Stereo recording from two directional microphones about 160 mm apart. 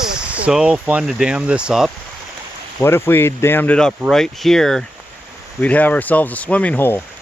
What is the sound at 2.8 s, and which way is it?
Speech, 15° left (ahead or behind).